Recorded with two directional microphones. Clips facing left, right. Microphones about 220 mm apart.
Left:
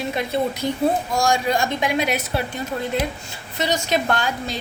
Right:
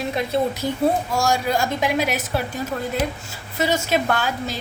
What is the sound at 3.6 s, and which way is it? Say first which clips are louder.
Speech: right 1 dB; 5° right (ahead or behind).